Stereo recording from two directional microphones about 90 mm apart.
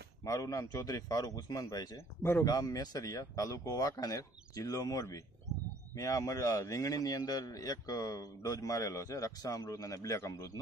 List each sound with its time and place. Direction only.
0.2 s a man's voice: 40° left (ahead or behind)